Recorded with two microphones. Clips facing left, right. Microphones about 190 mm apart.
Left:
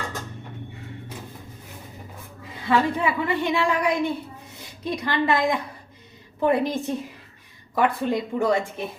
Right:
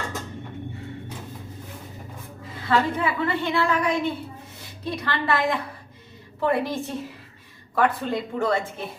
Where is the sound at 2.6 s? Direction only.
15° left (ahead or behind).